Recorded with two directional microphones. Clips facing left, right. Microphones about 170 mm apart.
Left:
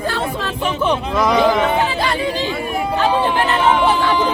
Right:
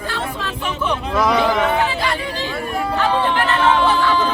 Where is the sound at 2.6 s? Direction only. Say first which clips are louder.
Left 1 dB; 10° left (ahead or behind).